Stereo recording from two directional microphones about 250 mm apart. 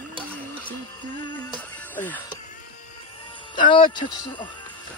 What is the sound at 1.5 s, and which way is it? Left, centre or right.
Music, centre.